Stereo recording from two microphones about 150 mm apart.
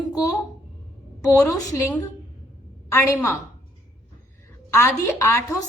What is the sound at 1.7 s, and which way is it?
A woman's voice, 15° left (ahead or behind).